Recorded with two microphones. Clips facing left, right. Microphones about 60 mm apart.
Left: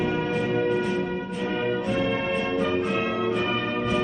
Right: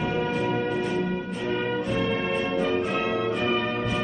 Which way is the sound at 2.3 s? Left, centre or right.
Centre.